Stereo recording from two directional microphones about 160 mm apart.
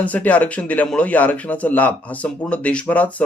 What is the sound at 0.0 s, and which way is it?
A man's voice, 10° left (ahead or behind).